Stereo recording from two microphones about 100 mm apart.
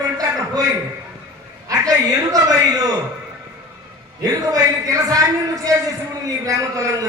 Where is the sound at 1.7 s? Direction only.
40° right (ahead or behind).